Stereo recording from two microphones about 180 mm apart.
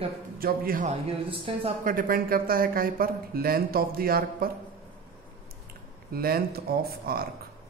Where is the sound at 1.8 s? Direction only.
50° right (ahead or behind).